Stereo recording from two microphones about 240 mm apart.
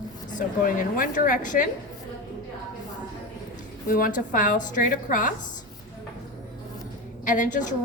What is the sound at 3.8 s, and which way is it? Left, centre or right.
A woman's voice, left.